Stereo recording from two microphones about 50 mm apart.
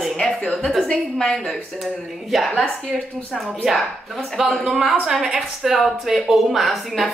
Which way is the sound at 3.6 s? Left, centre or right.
Centre.